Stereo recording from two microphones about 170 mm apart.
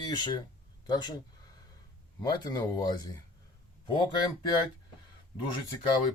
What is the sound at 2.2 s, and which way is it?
Speech, 25° left (ahead or behind).